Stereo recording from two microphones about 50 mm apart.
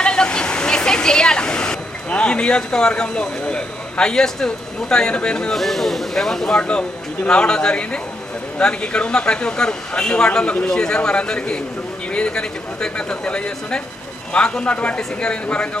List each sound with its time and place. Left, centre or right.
0.0 s a sound: centre
5.5 s speech: centre
6.6 s a man's voice: left